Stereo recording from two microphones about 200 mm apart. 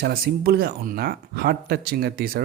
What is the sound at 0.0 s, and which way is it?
Speech, 50° right (ahead or behind).